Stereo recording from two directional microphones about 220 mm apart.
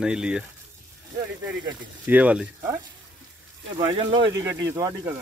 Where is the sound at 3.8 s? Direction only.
20° right (ahead or behind).